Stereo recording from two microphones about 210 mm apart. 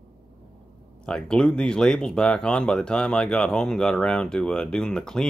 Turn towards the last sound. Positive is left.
turn(degrees=5)  # may be behind; listen again after turning